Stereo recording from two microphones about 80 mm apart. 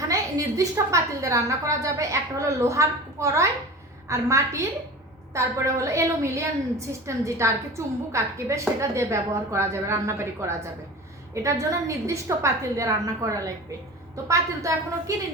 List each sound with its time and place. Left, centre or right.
0.1 s a woman's voice: right